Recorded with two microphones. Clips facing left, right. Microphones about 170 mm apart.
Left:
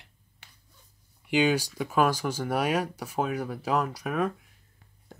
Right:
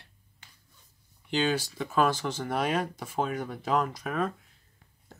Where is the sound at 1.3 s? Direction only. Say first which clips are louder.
Left 4 dB; 15° left (ahead or behind).